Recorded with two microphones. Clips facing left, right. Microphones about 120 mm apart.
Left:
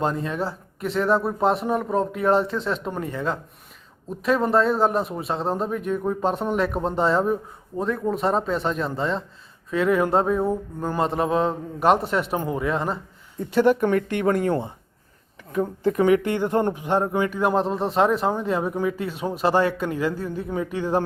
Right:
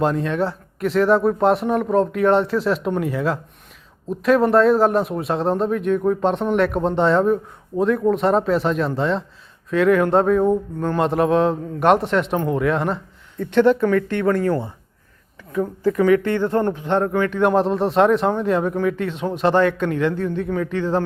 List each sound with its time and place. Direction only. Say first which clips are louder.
0.0 s speech: right 5 dB; centre (ahead or behind)
13.5 s speech: right 3 dB; 10° left (ahead or behind)